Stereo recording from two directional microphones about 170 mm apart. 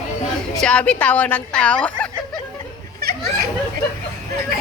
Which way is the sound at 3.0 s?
65° right (ahead or behind).